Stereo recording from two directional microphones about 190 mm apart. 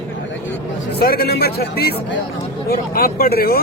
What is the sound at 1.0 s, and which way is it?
Speech, 55° left (ahead or behind).